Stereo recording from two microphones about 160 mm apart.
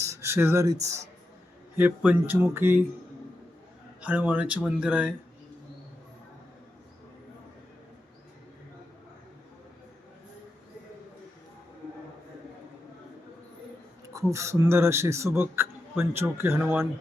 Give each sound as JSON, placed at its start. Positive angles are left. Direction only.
{"t": 0.0, "sound": "a sound", "side_deg": -15}
{"t": 1.7, "sound": "speech", "side_deg": -10}
{"t": 4.0, "sound": "speech", "side_deg": -10}
{"t": 14.1, "sound": "speech", "side_deg": -20}